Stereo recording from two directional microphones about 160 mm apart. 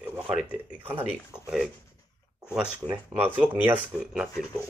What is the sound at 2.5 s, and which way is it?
Speech, 5° right (ahead or behind).